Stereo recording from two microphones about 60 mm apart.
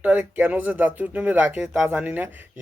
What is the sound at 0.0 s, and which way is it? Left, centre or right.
Speech, right.